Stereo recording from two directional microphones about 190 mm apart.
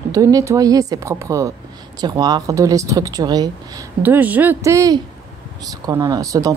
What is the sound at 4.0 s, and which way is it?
A woman's voice, 10° right (ahead or behind).